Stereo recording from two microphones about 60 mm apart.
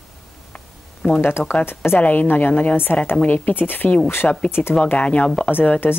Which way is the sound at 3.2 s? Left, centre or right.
Left.